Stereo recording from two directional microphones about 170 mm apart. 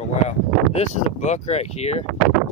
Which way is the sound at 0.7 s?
40° left (ahead or behind).